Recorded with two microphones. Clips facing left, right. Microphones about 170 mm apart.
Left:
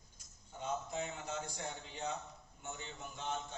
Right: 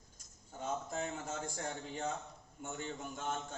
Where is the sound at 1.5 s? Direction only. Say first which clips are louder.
Right 4 dB; 50° right (ahead or behind).